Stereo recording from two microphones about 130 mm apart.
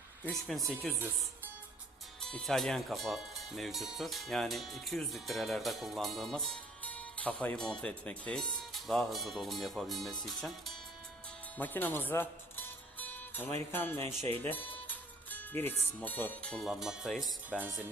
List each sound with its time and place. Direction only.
0.3 s speech: centre (ahead or behind)
2.2 s speech: 5° left (ahead or behind)
11.5 s music: 15° left (ahead or behind)
13.7 s speech: 15° left (ahead or behind); by 17.3 s centre (ahead or behind)